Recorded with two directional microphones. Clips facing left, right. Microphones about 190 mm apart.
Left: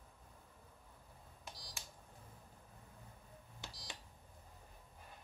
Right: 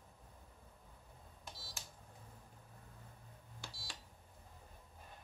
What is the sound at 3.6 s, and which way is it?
Beep, 20° left (ahead or behind).